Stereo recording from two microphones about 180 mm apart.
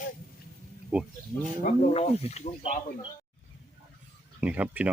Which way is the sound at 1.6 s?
35° left (ahead or behind).